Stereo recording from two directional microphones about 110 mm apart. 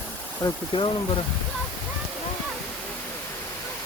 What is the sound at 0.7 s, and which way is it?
Speech, 50° left (ahead or behind).